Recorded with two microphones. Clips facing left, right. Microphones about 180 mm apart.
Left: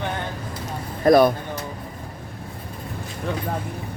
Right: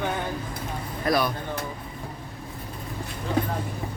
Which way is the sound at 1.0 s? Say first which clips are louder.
Left 10 dB; 50° left (ahead or behind).